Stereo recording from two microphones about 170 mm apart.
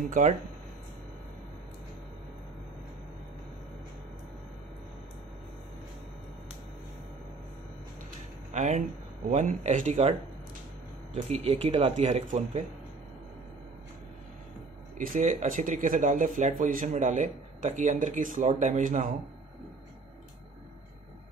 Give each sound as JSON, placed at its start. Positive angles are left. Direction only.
{"t": 8.5, "sound": "speech", "side_deg": -45}
{"t": 11.1, "sound": "speech", "side_deg": -40}
{"t": 15.0, "sound": "speech", "side_deg": -50}